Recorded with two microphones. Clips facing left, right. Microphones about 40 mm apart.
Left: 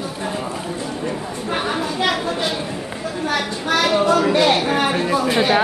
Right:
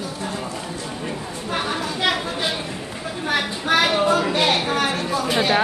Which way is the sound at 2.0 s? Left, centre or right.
Centre.